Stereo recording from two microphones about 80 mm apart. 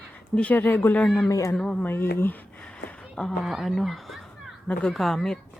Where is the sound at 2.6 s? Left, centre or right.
Centre.